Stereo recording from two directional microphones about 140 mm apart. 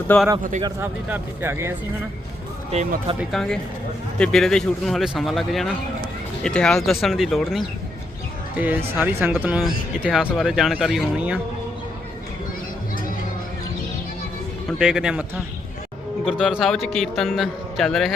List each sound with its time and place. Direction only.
0.1 s speech: 10° left (ahead or behind)
0.8 s speech: 15° right (ahead or behind)
3.2 s speech: 5° left (ahead or behind)
8.5 s speech: 15° right (ahead or behind)
14.7 s speech: 5° right (ahead or behind)